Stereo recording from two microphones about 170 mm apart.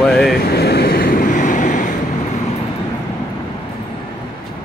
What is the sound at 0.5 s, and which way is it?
Vehicle, 70° left (ahead or behind).